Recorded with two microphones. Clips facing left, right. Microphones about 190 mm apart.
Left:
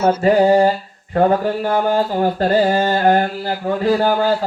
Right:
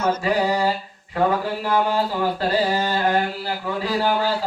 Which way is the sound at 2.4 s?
50° left (ahead or behind).